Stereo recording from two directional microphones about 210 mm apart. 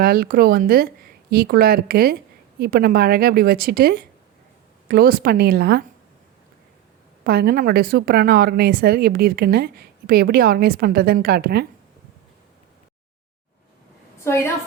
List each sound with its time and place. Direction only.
0.0 s a woman's voice: 45° right (ahead or behind)
7.3 s a woman's voice: 45° right (ahead or behind)
14.3 s a woman's voice: 10° left (ahead or behind)